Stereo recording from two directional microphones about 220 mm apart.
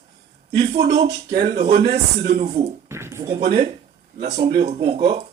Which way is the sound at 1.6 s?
25° right (ahead or behind).